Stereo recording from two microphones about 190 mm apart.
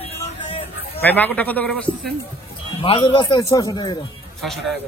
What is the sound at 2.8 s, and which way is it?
Speech, 25° left (ahead or behind).